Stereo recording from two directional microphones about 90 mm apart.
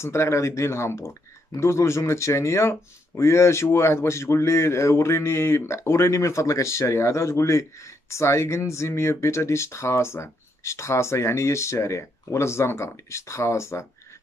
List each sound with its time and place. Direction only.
0.0 s speech: 30° left (ahead or behind)